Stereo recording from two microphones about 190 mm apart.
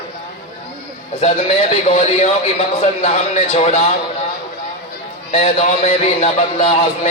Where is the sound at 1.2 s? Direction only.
35° left (ahead or behind).